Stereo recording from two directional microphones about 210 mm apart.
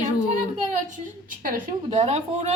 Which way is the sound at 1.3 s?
40° right (ahead or behind).